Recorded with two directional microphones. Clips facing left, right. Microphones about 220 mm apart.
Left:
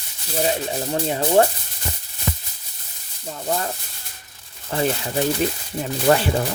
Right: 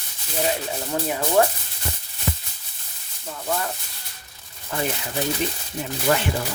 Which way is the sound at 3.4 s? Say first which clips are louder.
Left 2 dB; 25° left (ahead or behind).